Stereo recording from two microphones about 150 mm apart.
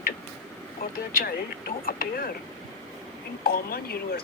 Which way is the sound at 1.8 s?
75° left (ahead or behind).